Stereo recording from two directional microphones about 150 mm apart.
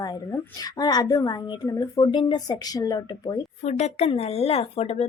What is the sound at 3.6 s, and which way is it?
Speech, 45° left (ahead or behind).